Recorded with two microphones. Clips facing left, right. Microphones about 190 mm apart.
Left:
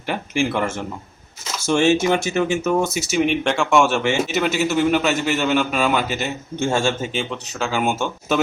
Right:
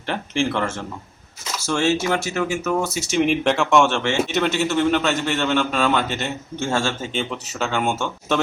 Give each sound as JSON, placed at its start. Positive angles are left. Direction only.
{"t": 0.0, "sound": "a man's voice", "side_deg": 10}
{"t": 3.1, "sound": "a man's voice", "side_deg": 0}
{"t": 7.1, "sound": "speech", "side_deg": 0}